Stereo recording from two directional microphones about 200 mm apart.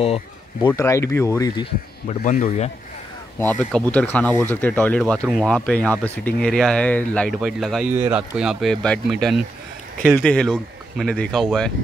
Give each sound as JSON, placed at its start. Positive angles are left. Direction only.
{"t": 0.0, "sound": "speech", "side_deg": 30}
{"t": 0.7, "sound": "speech", "side_deg": 15}
{"t": 2.0, "sound": "speech", "side_deg": 40}
{"t": 3.9, "sound": "speech", "side_deg": 5}